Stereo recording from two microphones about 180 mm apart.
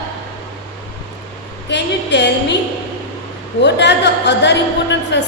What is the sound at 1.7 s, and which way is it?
Speech, 75° left (ahead or behind).